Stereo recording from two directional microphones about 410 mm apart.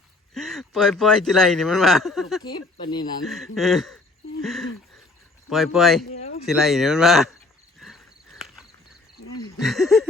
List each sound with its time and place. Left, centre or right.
0.3 s speech: centre
3.2 s speech: centre
6.1 s a sound: centre
6.4 s speech: centre
7.8 s a sound: centre
9.6 s speech: centre